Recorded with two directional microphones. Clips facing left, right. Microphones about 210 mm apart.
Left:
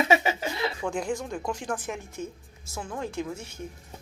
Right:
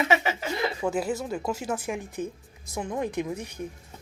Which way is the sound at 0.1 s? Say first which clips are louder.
Left 1 dB; 15° left (ahead or behind).